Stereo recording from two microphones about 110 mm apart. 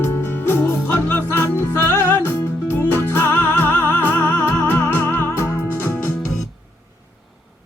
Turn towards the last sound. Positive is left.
turn(degrees=20)  # may be behind; listen again after turning